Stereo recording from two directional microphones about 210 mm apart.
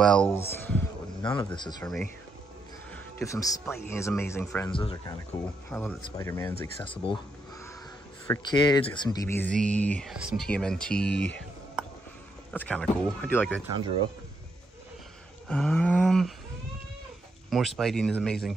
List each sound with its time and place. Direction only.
0.0 s speech: 5° left (ahead or behind)
1.2 s speech: 20° left (ahead or behind)
3.2 s speech: 15° left (ahead or behind)
4.7 s speech: 25° left (ahead or behind)
5.7 s speech: 5° left (ahead or behind); by 7.2 s 25° left (ahead or behind)
8.3 s speech: 20° left (ahead or behind)
15.4 s speech: 5° left (ahead or behind)
17.5 s speech: centre (ahead or behind)